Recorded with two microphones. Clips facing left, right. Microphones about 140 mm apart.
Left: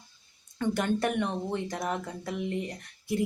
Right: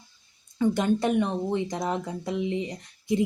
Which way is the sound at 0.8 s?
15° right (ahead or behind).